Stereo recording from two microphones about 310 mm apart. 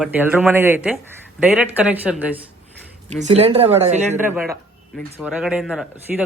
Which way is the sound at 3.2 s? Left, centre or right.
Right.